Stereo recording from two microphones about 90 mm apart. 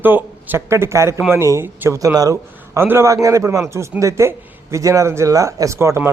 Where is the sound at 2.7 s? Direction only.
25° right (ahead or behind).